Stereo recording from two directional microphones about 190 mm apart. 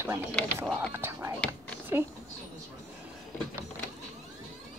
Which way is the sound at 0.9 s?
10° right (ahead or behind).